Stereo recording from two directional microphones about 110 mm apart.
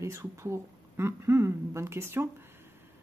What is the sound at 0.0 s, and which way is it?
Speech, 25° right (ahead or behind).